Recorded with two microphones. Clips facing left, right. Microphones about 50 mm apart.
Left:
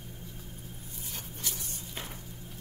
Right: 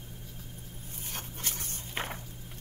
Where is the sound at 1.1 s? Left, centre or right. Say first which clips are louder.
Right 2 dB; right.